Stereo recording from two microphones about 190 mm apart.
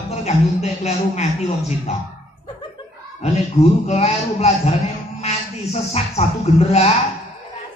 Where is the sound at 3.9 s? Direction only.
35° left (ahead or behind).